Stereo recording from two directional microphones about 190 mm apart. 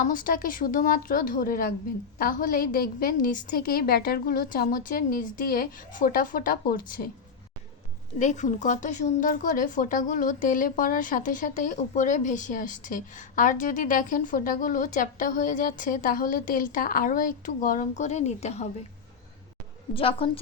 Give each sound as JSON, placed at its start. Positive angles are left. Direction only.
{"t": 0.1, "sound": "speech", "side_deg": 45}
{"t": 8.2, "sound": "speech", "side_deg": 40}
{"t": 19.9, "sound": "a woman's voice", "side_deg": 30}